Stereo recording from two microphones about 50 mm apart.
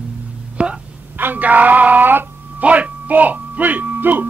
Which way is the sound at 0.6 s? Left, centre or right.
Right.